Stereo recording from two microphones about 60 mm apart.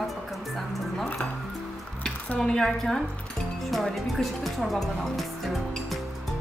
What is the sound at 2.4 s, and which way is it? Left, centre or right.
A woman's voice, centre.